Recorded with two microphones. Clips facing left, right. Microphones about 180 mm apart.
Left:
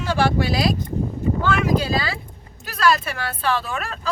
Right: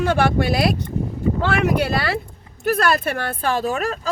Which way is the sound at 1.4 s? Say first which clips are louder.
Right 1 dB; 65° right (ahead or behind).